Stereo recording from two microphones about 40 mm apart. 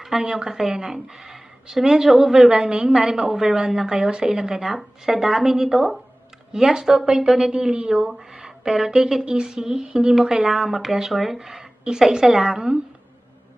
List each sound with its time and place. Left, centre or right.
0.2 s a woman's voice: centre
2.5 s a woman's voice: right
6.5 s a woman's voice: centre
7.5 s a woman's voice: right